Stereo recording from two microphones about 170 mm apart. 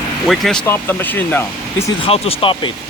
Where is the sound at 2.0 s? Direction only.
35° left (ahead or behind).